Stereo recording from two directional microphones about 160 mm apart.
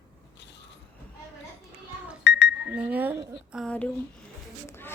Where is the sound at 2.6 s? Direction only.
5° right (ahead or behind).